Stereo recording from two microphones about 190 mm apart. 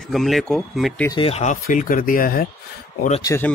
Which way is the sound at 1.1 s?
30° left (ahead or behind).